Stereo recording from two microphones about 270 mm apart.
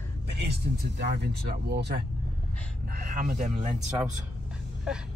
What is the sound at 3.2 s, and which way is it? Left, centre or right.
Speech, right.